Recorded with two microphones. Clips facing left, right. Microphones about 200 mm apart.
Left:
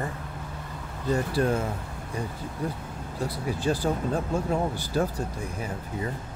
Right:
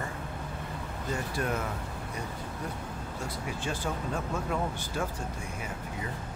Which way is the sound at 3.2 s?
35° left (ahead or behind).